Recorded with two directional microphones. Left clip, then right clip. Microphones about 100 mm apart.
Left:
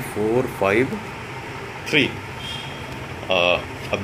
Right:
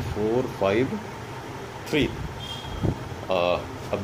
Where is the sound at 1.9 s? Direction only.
20° right (ahead or behind).